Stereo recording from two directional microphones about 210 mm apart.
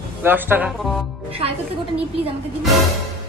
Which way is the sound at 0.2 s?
10° right (ahead or behind).